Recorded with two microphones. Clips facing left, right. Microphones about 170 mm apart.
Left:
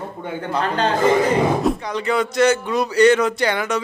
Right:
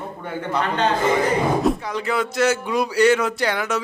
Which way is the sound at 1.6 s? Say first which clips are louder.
Left 1 dB; centre (ahead or behind).